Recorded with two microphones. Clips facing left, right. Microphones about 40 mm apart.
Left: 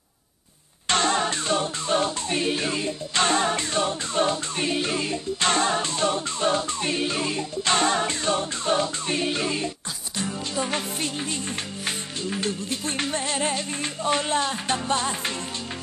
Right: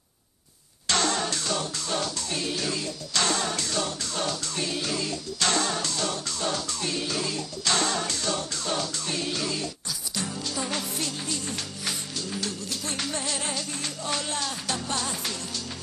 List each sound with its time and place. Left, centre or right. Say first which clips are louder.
0.8 s music: left 4 dB; left